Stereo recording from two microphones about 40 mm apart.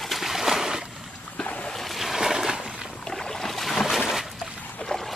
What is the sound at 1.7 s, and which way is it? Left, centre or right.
Boat, centre.